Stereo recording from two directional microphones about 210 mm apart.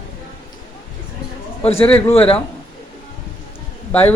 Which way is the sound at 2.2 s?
5° left (ahead or behind).